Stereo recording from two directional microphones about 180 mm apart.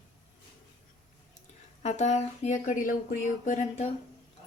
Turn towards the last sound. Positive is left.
turn(degrees=40)  # may be behind; listen again after turning